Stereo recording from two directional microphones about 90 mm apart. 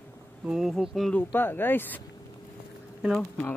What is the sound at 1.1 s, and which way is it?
Speech, 25° left (ahead or behind).